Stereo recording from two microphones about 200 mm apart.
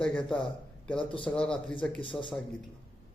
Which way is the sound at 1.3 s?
5° left (ahead or behind).